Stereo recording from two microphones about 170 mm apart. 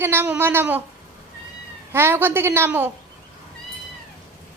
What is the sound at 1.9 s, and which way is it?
A woman's voice, 15° right (ahead or behind).